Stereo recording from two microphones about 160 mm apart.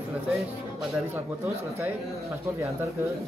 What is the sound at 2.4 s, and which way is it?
Speech, 20° right (ahead or behind).